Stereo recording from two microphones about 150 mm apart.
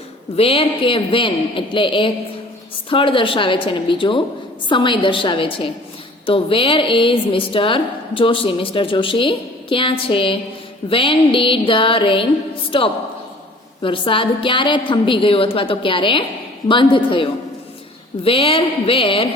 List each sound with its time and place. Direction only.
0.3 s a woman's voice: 40° left (ahead or behind)